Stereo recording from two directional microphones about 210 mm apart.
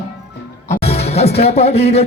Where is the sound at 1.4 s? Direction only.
30° left (ahead or behind).